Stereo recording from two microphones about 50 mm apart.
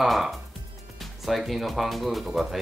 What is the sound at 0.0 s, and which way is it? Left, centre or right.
Speech, centre.